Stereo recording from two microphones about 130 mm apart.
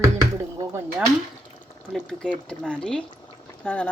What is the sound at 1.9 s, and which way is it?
Speech, 5° left (ahead or behind).